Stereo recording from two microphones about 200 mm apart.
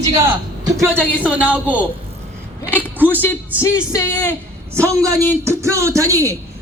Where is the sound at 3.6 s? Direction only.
15° left (ahead or behind).